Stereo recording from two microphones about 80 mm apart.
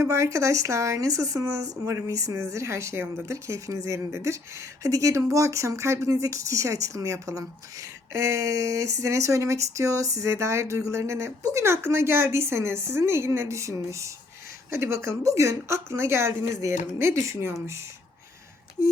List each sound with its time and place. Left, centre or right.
0.0 s speech: right